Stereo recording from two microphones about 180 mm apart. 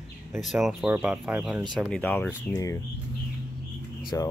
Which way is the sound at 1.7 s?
5° left (ahead or behind).